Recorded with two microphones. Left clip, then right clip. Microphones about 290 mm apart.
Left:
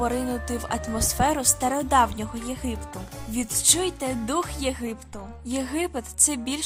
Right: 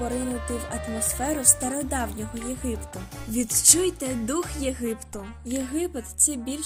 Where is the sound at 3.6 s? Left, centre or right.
Centre.